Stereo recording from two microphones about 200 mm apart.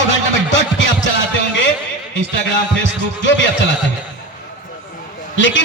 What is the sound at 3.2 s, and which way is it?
Speech, 65° left (ahead or behind).